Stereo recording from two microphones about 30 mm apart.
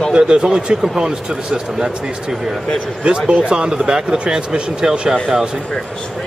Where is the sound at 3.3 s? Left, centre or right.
Right.